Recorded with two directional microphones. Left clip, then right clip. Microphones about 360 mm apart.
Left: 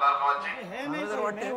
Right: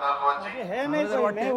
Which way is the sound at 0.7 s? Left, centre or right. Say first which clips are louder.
Right 6 dB; centre.